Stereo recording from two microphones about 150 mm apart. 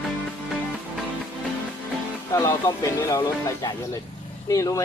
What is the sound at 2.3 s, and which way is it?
Speech, 20° left (ahead or behind).